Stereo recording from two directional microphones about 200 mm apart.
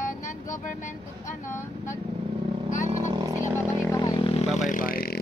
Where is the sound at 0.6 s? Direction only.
40° left (ahead or behind).